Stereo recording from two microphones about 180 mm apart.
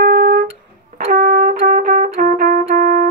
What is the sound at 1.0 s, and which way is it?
Trumpet, 50° right (ahead or behind).